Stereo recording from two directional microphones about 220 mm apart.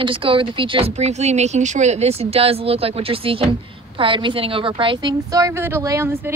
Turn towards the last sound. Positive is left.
turn(degrees=-10)  # may be behind; listen again after turning